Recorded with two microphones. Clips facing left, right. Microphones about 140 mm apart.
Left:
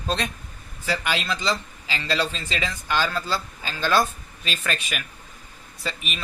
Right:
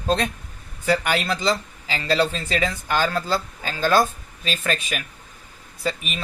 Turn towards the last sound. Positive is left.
turn(degrees=-40)  # may be behind; listen again after turning